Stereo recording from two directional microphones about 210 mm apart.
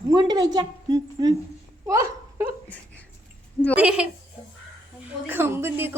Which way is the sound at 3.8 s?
5° right (ahead or behind).